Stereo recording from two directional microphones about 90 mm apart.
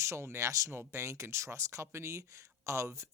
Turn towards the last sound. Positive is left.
turn(degrees=-35)  # may be behind; listen again after turning